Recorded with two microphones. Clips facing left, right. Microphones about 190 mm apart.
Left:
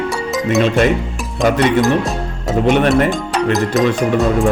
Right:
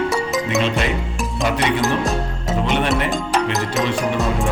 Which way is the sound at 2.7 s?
50° left (ahead or behind).